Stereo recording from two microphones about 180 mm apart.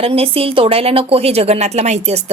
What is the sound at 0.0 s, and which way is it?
A woman's voice, 30° right (ahead or behind).